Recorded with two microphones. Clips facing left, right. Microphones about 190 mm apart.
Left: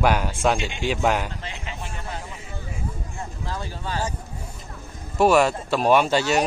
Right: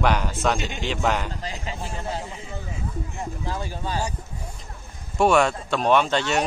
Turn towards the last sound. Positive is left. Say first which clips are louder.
# left 2 dB
turn(degrees=5)  # may be behind; listen again after turning